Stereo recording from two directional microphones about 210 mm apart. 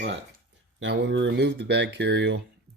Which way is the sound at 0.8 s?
55° right (ahead or behind).